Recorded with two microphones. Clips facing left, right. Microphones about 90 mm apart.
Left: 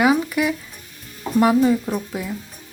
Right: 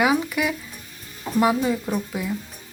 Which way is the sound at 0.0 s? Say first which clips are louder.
Left 3 dB; 5° right (ahead or behind).